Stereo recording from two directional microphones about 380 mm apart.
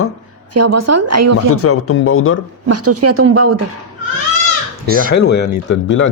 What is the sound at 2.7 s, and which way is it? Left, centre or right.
Speech, right.